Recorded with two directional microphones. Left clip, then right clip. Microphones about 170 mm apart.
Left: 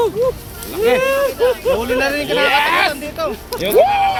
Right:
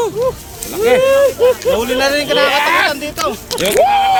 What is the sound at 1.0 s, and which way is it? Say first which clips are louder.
Speech: right 5 dB; 10° left (ahead or behind).